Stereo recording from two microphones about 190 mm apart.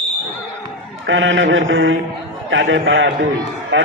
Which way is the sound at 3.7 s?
75° right (ahead or behind).